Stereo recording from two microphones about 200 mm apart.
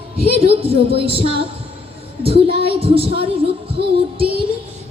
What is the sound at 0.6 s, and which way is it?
Music, 30° right (ahead or behind).